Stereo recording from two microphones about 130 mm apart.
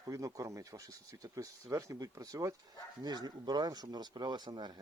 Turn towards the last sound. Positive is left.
turn(degrees=-35)  # may be behind; listen again after turning